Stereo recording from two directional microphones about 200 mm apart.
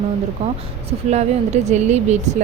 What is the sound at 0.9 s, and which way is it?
Speech, 35° right (ahead or behind).